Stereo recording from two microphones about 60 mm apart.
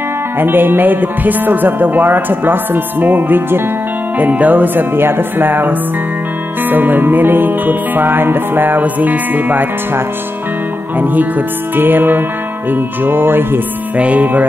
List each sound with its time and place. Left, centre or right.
0.4 s music: right
4.2 s music: right
13.9 s music: right